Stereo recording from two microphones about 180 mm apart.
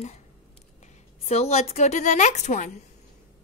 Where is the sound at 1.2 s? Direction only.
35° left (ahead or behind).